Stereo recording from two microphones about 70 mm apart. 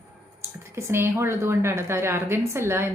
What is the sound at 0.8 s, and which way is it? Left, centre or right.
A woman's voice, right.